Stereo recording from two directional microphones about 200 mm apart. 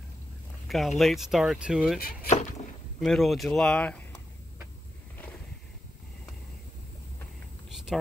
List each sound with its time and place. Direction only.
0.7 s speech: centre (ahead or behind)
2.0 s speech: 50° left (ahead or behind)
3.0 s speech: centre (ahead or behind)
7.7 s a sound: centre (ahead or behind)